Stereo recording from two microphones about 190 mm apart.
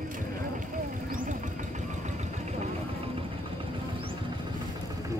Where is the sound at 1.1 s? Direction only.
40° right (ahead or behind).